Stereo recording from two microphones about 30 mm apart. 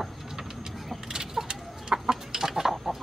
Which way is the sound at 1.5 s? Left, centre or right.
Right.